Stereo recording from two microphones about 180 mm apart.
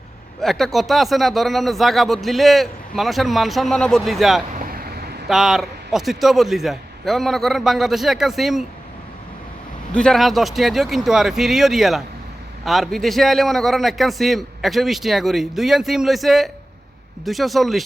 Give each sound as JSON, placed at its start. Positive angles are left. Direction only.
{"t": 0.4, "sound": "speech", "side_deg": 0}
{"t": 4.5, "sound": "vehicle", "side_deg": -55}
{"t": 5.3, "sound": "speech", "side_deg": 0}
{"t": 9.9, "sound": "speech", "side_deg": 5}